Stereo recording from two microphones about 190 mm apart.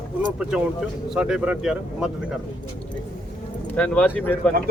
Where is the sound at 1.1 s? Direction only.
5° right (ahead or behind).